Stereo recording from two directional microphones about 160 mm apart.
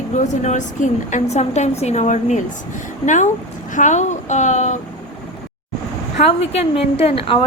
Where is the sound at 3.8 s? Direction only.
50° left (ahead or behind).